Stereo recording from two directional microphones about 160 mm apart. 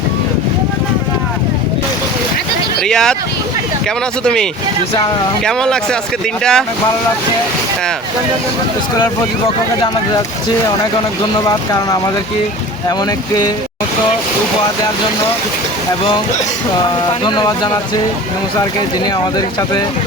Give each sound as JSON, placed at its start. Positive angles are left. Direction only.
{"t": 2.8, "sound": "speech", "side_deg": 5}
{"t": 4.2, "sound": "speech", "side_deg": 5}
{"t": 5.5, "sound": "speech", "side_deg": 5}
{"t": 11.4, "sound": "speech", "side_deg": 25}
{"t": 17.2, "sound": "speech", "side_deg": 25}